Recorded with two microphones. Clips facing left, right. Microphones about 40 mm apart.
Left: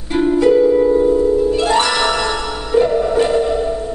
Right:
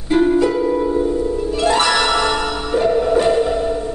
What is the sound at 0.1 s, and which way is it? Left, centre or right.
Harp, centre.